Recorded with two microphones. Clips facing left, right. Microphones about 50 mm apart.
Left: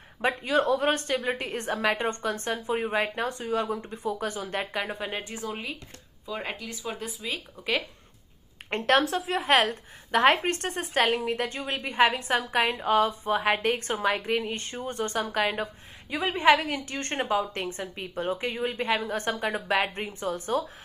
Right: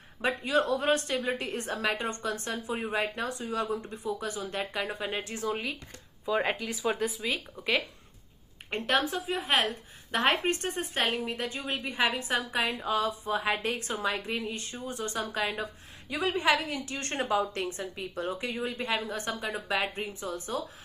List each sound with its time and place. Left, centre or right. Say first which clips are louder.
0.4 s a woman's voice: left 3 dB; left
6.4 s speech: right 5 dB; centre
7.2 s speech: right 1 dB; centre
8.6 s speech: left 5 dB; left
9.6 s a woman's voice: left 4 dB; left
11.8 s a woman's voice: left 7 dB; left